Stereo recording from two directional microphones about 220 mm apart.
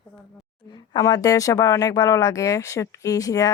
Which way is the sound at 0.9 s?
15° left (ahead or behind).